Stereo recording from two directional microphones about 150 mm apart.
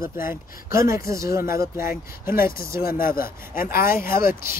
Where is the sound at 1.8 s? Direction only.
75° left (ahead or behind).